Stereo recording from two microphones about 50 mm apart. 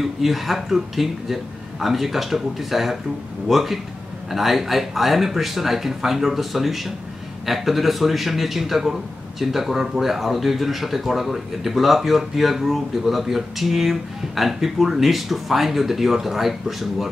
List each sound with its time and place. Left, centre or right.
0.0 s speech: centre